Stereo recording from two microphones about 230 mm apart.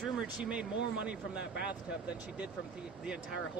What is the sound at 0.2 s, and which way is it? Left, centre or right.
Speech, centre.